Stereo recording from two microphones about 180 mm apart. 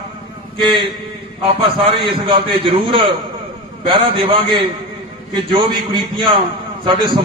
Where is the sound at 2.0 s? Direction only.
30° right (ahead or behind).